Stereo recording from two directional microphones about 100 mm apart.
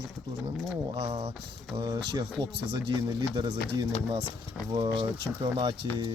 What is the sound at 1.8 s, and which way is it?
Speech, 50° right (ahead or behind).